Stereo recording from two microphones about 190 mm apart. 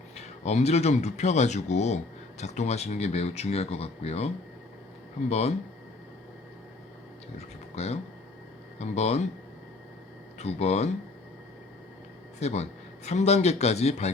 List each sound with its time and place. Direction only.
0.2 s speech: 35° left (ahead or behind)
5.3 s speech: 35° left (ahead or behind)
7.3 s speech: 35° left (ahead or behind)
10.3 s speech: 35° left (ahead or behind)
12.4 s speech: 35° left (ahead or behind)